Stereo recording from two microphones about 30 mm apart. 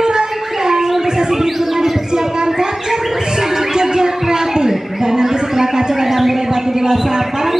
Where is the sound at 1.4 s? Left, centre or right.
Centre.